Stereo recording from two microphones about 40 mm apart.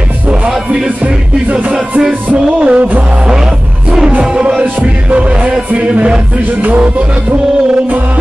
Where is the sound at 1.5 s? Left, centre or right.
Right.